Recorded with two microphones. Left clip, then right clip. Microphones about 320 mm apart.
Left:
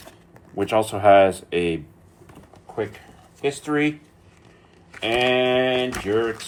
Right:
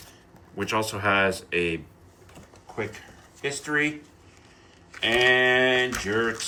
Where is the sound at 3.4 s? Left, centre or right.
Centre.